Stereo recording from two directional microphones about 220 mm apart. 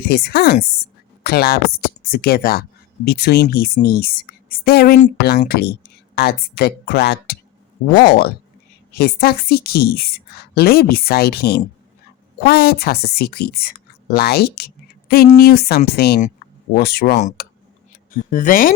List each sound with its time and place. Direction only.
0.1 s a woman's voice: 45° left (ahead or behind)
4.9 s speech: 30° left (ahead or behind)
5.5 s a woman's voice: 45° left (ahead or behind)
17.4 s tick: 45° left (ahead or behind)
18.1 s speech: 35° left (ahead or behind)